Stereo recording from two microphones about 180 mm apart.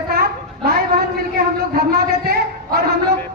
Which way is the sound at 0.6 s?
60° right (ahead or behind).